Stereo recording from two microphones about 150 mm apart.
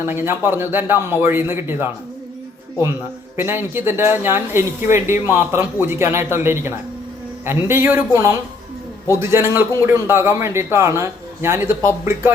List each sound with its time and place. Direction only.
0.0 s a man's voice: 15° right (ahead or behind)
3.3 s a man's voice: 15° right (ahead or behind)